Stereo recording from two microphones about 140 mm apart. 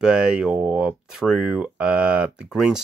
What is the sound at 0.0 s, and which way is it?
Speech, 5° right (ahead or behind).